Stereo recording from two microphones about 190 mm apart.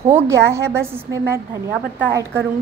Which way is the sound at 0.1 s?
15° right (ahead or behind).